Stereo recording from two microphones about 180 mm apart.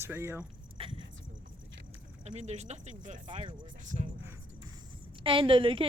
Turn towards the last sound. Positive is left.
turn(degrees=-30)  # may be behind; listen again after turning